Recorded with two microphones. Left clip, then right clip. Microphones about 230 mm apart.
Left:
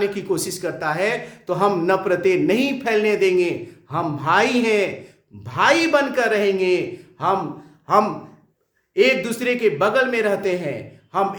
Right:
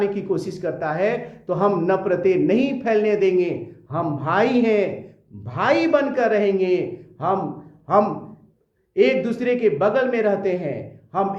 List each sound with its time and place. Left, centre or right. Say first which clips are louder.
0.0 s a man's voice: even; centre